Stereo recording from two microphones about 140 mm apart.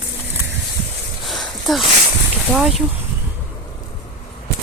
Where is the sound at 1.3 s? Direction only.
Centre (ahead or behind).